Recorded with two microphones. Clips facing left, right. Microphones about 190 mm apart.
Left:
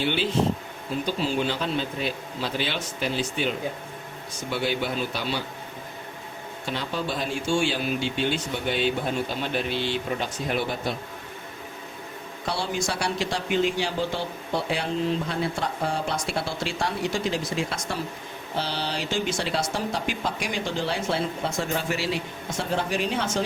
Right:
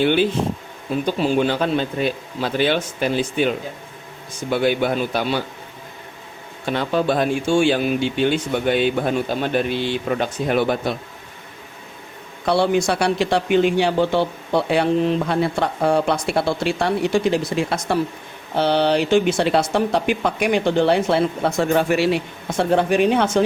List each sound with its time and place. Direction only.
0.0 s a man's voice: 55° right (ahead or behind)
6.7 s a man's voice: 60° right (ahead or behind)
12.5 s a man's voice: 65° right (ahead or behind)